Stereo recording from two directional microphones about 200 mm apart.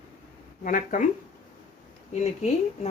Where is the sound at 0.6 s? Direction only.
40° left (ahead or behind).